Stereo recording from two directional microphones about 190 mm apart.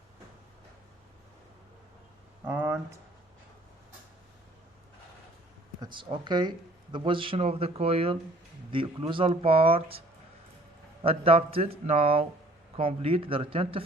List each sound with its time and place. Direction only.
2.4 s a sound: 10° right (ahead or behind)
5.8 s speech: 25° right (ahead or behind)
11.0 s speech: 30° right (ahead or behind)